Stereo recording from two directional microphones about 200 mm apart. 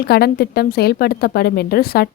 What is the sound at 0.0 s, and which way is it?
A woman's voice, 50° left (ahead or behind).